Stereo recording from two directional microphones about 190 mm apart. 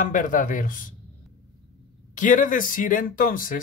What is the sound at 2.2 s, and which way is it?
Speech, 45° left (ahead or behind).